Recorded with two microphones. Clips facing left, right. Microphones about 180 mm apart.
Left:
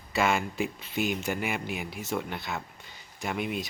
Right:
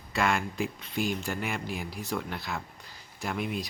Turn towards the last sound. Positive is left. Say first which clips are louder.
# left 1 dB
turn(degrees=0)  # may be behind; listen again after turning